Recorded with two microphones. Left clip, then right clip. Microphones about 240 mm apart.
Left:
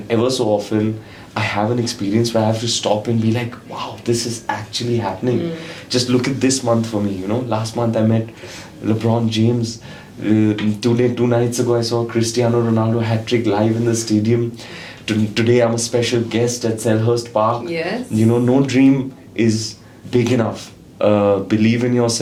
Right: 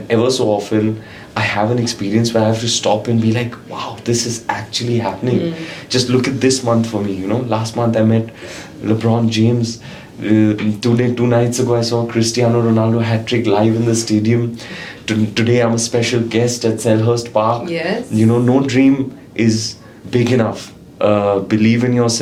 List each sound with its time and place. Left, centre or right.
0.1 s speech: left
5.9 s speech: left
17.7 s speech: centre
18.2 s speech: left